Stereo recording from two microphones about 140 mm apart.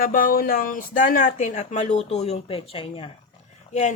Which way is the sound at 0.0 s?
85° left.